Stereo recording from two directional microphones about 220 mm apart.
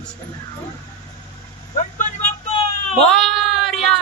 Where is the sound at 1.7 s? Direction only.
35° left (ahead or behind).